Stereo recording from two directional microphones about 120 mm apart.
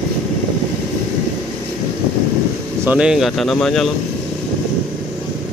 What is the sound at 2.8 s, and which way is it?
Speech, 5° right (ahead or behind).